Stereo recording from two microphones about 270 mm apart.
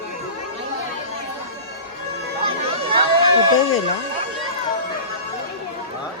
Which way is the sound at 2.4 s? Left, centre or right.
Centre.